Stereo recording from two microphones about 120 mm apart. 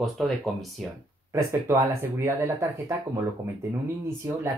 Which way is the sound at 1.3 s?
25° right (ahead or behind).